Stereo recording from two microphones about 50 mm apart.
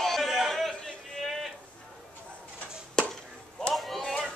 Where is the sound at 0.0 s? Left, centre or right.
Centre.